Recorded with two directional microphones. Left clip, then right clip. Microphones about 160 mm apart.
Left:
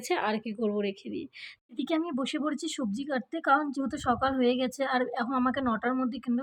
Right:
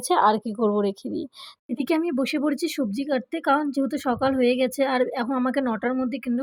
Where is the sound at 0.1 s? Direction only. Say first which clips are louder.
Right 10 dB; 35° right (ahead or behind).